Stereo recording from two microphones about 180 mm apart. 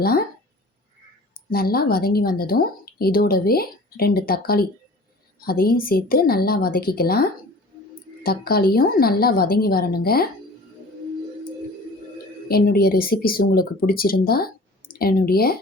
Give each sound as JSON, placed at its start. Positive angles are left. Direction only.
{"t": 1.5, "sound": "a woman's voice", "side_deg": 55}
{"t": 12.5, "sound": "a woman's voice", "side_deg": 55}